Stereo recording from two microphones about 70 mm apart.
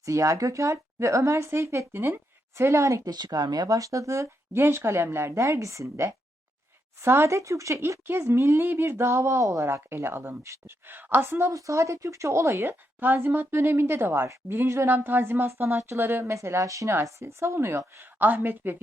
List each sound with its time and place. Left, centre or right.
0.0 s speech: right
3.0 s a woman's voice: right
3.7 s speech: right
4.6 s speech: right
8.0 s speech: right
10.8 s speech: right
11.5 s speech: right
13.0 s speech: right
18.2 s a woman's voice: right